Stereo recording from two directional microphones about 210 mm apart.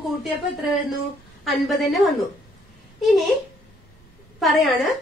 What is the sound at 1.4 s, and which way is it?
Speech, centre (ahead or behind).